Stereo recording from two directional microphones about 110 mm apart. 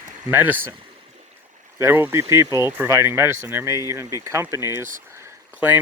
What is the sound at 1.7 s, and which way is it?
Speech, 20° right (ahead or behind).